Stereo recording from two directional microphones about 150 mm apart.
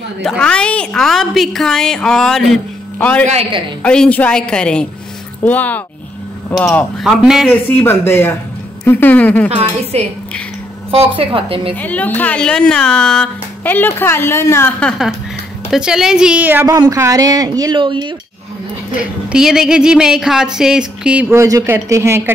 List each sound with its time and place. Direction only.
0.2 s speech: 5° left (ahead or behind)
7.0 s speech: 5° right (ahead or behind)
7.4 s speech: 15° left (ahead or behind)
9.5 s a woman's voice: 45° right (ahead or behind)
11.7 s speech: 10° left (ahead or behind)
14.8 s speech: centre (ahead or behind)
16.6 s speech: 25° right (ahead or behind)
18.9 s speech: 5° right (ahead or behind)